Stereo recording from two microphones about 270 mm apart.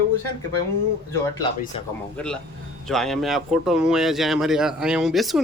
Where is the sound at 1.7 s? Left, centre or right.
Left.